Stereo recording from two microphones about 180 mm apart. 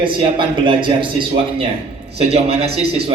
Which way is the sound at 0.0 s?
25° right (ahead or behind).